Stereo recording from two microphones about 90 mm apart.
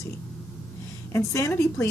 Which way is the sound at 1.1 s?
30° left (ahead or behind).